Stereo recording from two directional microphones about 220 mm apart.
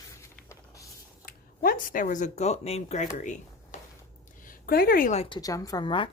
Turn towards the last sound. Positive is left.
turn(degrees=20)  # may be behind; listen again after turning